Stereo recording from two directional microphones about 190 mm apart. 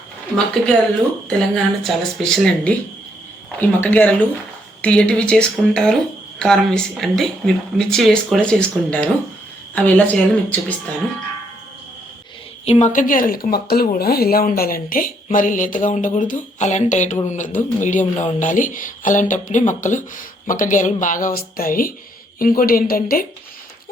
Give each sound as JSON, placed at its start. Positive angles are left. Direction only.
{"t": 1.3, "sound": "a woman's voice", "side_deg": 5}
{"t": 12.6, "sound": "speech", "side_deg": 35}